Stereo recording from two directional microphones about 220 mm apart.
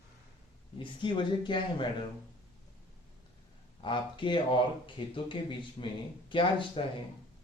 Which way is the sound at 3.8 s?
20° left (ahead or behind).